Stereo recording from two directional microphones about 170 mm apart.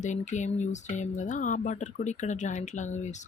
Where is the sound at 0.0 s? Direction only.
45° left (ahead or behind).